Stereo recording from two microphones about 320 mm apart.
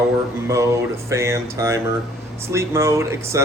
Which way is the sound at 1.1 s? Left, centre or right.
Centre.